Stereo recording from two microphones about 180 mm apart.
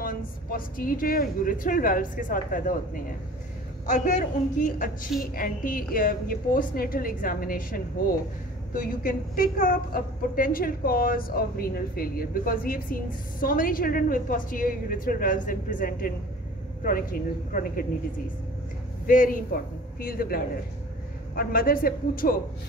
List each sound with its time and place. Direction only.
0.0 s a woman's voice: 50° left (ahead or behind)
17.5 s a woman's voice: 50° left (ahead or behind)
19.0 s a man's voice: 50° left (ahead or behind)